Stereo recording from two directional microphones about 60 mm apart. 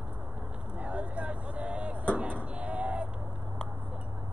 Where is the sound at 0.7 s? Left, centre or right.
Right.